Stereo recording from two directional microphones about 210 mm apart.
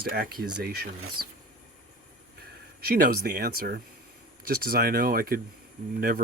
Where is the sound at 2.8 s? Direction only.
45° right (ahead or behind).